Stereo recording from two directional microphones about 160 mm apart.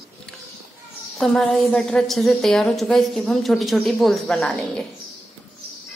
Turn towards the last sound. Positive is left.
turn(degrees=5)  # may be behind; listen again after turning